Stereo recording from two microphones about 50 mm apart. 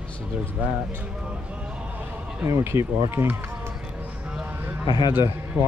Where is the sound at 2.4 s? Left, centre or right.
Right.